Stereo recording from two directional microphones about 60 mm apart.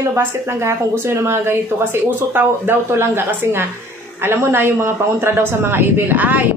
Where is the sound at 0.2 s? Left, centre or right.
Right.